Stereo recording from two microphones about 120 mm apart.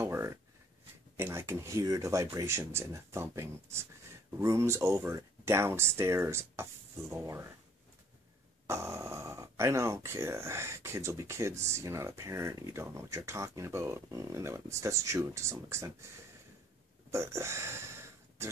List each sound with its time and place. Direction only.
0.0 s a sound: 20° right (ahead or behind)
1.1 s speech: 20° right (ahead or behind)
8.6 s speech: 20° right (ahead or behind)
17.1 s speech: 25° right (ahead or behind)